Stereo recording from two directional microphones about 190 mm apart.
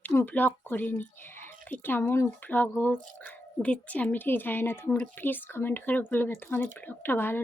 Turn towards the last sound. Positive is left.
turn(degrees=10)  # may be behind; listen again after turning